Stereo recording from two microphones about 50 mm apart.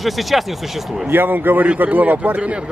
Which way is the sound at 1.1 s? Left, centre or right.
Right.